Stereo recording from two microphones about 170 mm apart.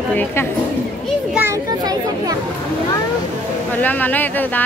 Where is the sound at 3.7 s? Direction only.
10° left (ahead or behind).